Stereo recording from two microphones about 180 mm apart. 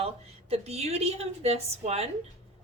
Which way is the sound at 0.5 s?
35° right (ahead or behind).